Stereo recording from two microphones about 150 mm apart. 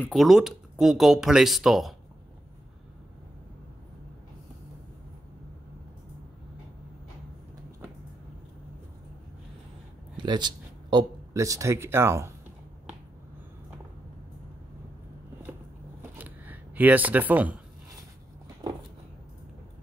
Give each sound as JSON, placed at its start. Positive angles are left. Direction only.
{"t": 0.1, "sound": "speech", "side_deg": 0}
{"t": 10.1, "sound": "speech", "side_deg": -30}
{"t": 16.2, "sound": "a sound", "side_deg": -10}